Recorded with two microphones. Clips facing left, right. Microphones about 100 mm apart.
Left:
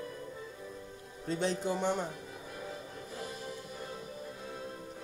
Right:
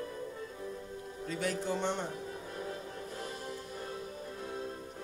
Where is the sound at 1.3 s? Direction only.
25° left (ahead or behind).